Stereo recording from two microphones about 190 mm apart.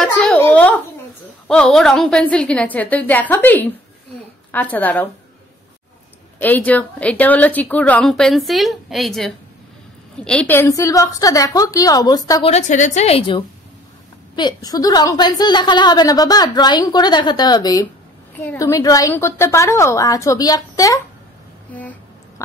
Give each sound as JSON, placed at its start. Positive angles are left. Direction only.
{"t": 0.0, "sound": "a sound", "side_deg": 5}
{"t": 1.5, "sound": "a woman's voice", "side_deg": 5}
{"t": 6.4, "sound": "a woman's voice", "side_deg": 10}
{"t": 12.4, "sound": "a woman's voice", "side_deg": 35}
{"t": 14.3, "sound": "a woman's voice", "side_deg": 20}
{"t": 18.3, "sound": "a woman's voice", "side_deg": 10}